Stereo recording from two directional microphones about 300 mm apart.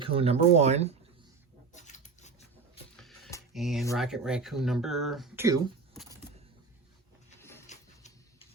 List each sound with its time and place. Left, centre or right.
0.0 s speech: centre
1.7 s a sound: left
2.9 s music: centre
3.5 s speech: centre
7.7 s printer: left